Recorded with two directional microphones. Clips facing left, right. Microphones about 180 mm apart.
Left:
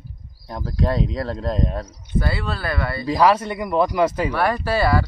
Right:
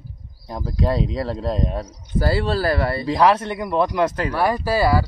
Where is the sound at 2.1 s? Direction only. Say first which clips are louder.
Right 5 dB; 35° right (ahead or behind).